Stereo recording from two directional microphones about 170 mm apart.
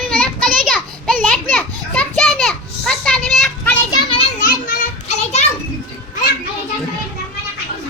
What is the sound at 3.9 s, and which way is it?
Children playing, 35° left (ahead or behind).